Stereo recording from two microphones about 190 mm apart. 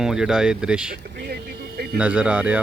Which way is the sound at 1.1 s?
60° right (ahead or behind).